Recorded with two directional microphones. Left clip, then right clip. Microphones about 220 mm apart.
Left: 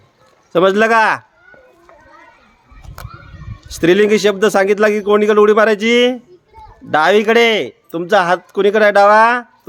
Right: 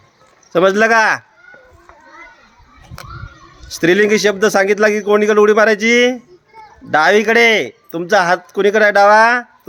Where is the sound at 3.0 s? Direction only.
45° left (ahead or behind).